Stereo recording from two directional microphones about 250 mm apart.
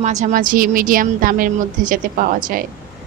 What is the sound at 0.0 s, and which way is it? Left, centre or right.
A woman's voice, right.